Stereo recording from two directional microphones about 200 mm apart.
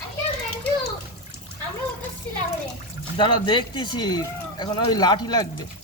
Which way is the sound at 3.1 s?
25° left (ahead or behind).